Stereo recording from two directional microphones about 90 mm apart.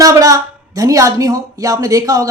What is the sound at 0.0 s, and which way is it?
Speech, 40° right (ahead or behind).